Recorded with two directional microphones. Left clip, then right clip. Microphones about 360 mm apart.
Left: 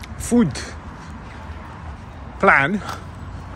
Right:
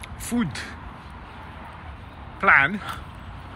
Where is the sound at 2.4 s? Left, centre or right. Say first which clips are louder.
Left 2 dB; centre.